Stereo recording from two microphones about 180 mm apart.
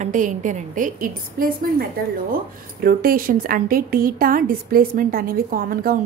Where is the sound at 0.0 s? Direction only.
45° right (ahead or behind).